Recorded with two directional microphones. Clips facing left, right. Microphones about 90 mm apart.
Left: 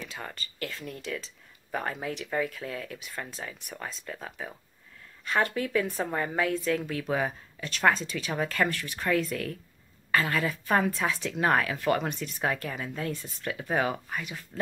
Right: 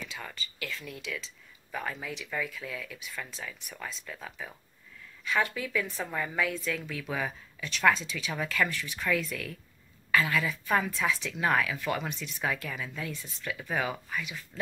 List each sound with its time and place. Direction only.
0.1 s speech: 40° left (ahead or behind)
5.2 s speech: 45° left (ahead or behind)
14.5 s speech: 20° left (ahead or behind)